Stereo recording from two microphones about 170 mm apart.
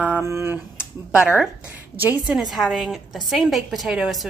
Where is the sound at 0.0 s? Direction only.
10° right (ahead or behind).